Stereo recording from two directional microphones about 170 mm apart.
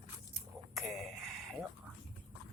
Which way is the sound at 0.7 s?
Centre (ahead or behind).